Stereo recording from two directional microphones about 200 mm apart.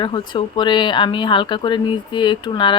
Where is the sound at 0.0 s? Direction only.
25° left (ahead or behind).